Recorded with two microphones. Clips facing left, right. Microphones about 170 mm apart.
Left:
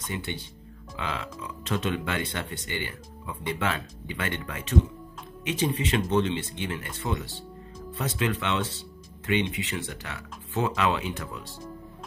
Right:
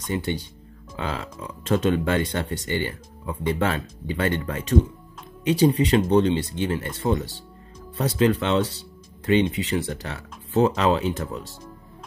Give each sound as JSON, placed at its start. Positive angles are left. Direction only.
{"t": 0.1, "sound": "speech", "side_deg": -40}